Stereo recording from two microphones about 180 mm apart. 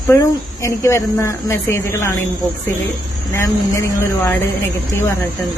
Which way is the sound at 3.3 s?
15° left (ahead or behind).